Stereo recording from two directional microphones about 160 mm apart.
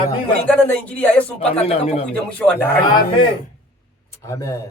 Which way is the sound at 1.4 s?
40° left (ahead or behind).